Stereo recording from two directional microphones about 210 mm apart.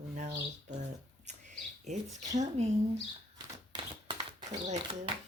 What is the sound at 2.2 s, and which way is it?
Speech, 35° right (ahead or behind).